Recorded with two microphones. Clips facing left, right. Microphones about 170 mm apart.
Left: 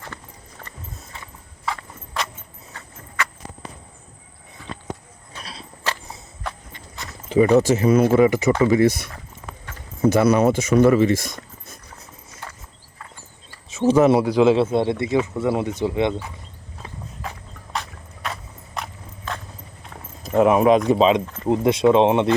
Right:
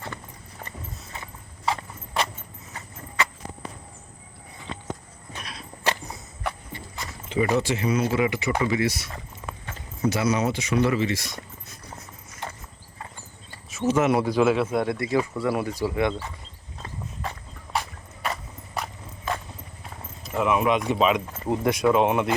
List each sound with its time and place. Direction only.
1.6 s clip-clop: 20° right (ahead or behind)
5.4 s walk: 30° left (ahead or behind)
7.3 s speech: 35° left (ahead or behind)
13.7 s speech: 30° left (ahead or behind)
14.2 s speech: 20° left (ahead or behind)
17.7 s horse: 10° right (ahead or behind)
20.2 s speech: 45° left (ahead or behind)
21.4 s speech: 20° left (ahead or behind)